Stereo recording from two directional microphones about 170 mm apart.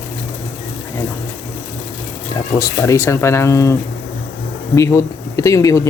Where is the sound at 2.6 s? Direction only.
15° left (ahead or behind).